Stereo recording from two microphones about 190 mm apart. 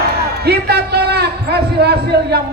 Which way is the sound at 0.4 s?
60° right (ahead or behind).